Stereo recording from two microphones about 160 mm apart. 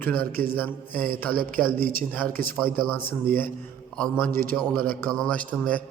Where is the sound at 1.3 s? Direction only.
60° right (ahead or behind).